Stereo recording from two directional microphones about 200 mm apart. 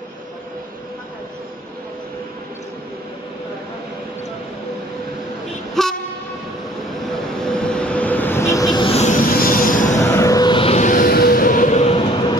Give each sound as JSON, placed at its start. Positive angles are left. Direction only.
{"t": 5.8, "sound": "train", "side_deg": 0}
{"t": 7.3, "sound": "vehicle", "side_deg": 5}
{"t": 9.2, "sound": "train", "side_deg": 45}
{"t": 9.9, "sound": "a sound", "side_deg": 15}